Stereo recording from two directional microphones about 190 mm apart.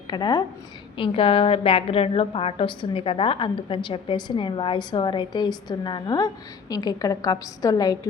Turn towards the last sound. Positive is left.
turn(degrees=20)  # may be behind; listen again after turning